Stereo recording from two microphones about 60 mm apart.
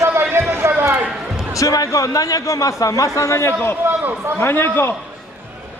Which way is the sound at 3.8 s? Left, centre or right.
Right.